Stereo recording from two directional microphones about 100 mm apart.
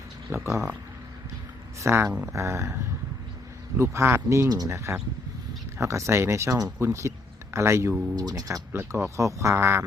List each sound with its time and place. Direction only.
0.3 s speech: 25° right (ahead or behind)
1.8 s speech: 30° right (ahead or behind)
4.7 s speech: 25° right (ahead or behind)
8.1 s speech: 40° right (ahead or behind)
8.7 s speech: 25° right (ahead or behind)